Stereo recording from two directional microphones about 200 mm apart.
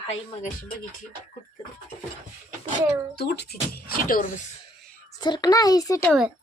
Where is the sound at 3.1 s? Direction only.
50° left (ahead or behind).